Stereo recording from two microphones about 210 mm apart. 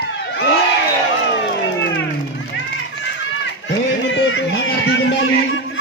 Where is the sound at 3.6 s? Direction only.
60° left (ahead or behind).